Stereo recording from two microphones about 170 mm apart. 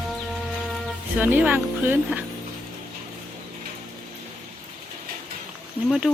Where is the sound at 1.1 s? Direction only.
10° right (ahead or behind).